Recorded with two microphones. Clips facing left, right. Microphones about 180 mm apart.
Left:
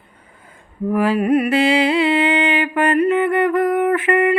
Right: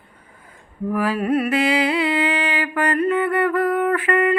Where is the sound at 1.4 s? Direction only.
25° left (ahead or behind).